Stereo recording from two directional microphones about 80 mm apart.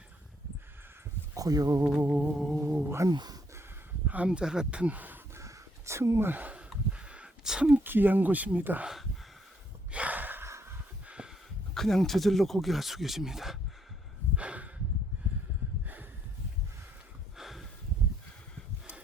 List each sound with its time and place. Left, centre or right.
1.3 s speech: right
2.0 s music: centre
3.1 s speech: right
4.0 s speech: centre
5.4 s a sound: right; by 7.8 s centre
7.9 s speech: right
9.9 s gasp: centre
10.4 s snort: right
11.0 s a sound: centre
11.7 s speech: centre
14.3 s snort: centre
17.3 s a sound: centre